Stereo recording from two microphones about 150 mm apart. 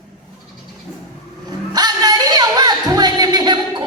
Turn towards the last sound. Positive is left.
turn(degrees=-30)  # may be behind; listen again after turning